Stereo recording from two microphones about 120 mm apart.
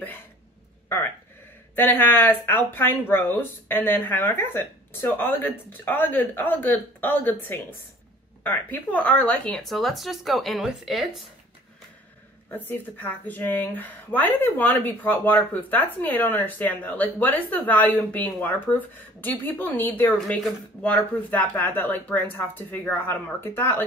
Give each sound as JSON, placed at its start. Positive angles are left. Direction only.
{"t": 1.8, "sound": "speech", "side_deg": 15}
{"t": 12.4, "sound": "speech", "side_deg": 15}